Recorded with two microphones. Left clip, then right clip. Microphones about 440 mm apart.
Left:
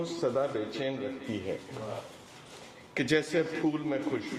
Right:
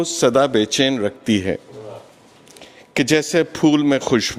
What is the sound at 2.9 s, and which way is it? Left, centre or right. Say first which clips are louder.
Speech: right 11 dB; right.